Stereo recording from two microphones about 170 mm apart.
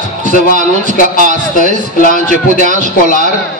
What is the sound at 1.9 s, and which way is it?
Speech, 55° left (ahead or behind).